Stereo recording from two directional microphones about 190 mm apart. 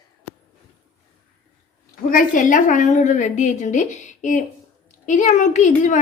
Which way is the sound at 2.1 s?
45° left (ahead or behind).